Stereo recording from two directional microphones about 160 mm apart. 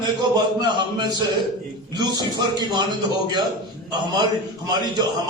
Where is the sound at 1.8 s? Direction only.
25° right (ahead or behind).